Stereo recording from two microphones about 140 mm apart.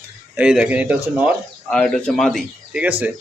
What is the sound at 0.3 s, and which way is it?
Speech, 5° right (ahead or behind).